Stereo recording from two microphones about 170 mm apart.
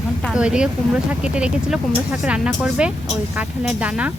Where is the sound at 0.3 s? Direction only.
5° right (ahead or behind).